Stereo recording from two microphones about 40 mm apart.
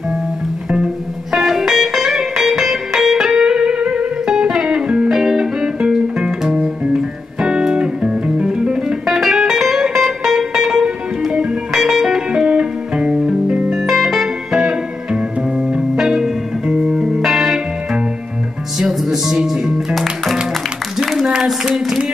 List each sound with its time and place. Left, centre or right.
1.3 s music: centre
3.3 s music: centre
13.1 s music: centre
17.0 s music: centre
18.8 s music: centre
21.0 s a sound: centre